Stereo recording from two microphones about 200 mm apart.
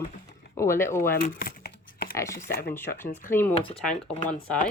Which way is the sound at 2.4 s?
50° left (ahead or behind).